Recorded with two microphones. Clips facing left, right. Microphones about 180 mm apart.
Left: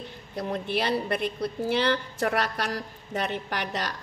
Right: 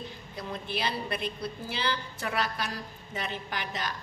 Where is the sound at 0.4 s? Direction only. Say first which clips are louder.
Left 6 dB; 65° left (ahead or behind).